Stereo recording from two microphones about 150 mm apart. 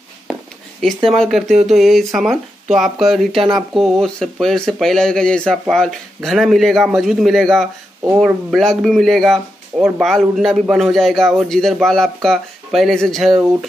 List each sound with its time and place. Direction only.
0.3 s a sound: centre (ahead or behind)
1.7 s a man's voice: centre (ahead or behind)
3.3 s speech: 30° right (ahead or behind)
3.7 s a man's voice: centre (ahead or behind)